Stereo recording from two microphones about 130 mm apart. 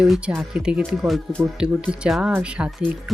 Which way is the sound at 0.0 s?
10° right (ahead or behind).